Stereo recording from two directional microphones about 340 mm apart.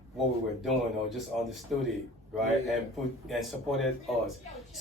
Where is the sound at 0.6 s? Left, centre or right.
Centre.